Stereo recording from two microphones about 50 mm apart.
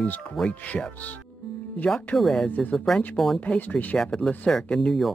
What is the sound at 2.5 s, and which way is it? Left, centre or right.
Speech, left.